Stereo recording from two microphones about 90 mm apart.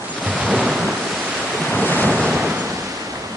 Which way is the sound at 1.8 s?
20° left (ahead or behind).